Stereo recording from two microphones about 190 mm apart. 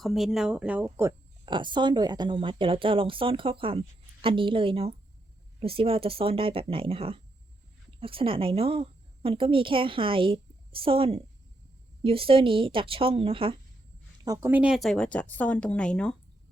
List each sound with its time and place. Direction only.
0.0 s speech: centre (ahead or behind)
1.5 s a woman's voice: 25° right (ahead or behind)
14.3 s speech: 10° right (ahead or behind); by 16.1 s 5° left (ahead or behind)